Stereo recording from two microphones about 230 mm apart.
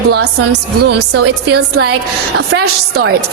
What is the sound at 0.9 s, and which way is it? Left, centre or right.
A woman's voice, right.